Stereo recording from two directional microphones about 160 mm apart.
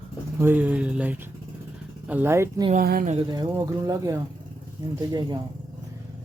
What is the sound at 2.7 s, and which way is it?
Speech, 65° right (ahead or behind).